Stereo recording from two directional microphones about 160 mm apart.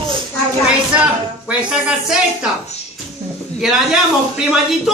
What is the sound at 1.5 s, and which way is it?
A woman's voice, 5° right (ahead or behind).